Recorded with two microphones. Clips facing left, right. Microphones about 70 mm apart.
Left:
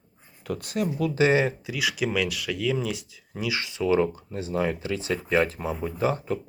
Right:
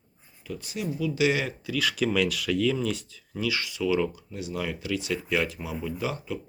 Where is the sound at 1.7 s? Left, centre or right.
Centre.